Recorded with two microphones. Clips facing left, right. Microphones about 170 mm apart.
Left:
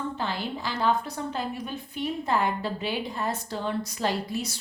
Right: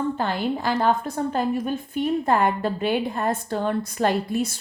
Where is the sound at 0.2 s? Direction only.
55° right (ahead or behind).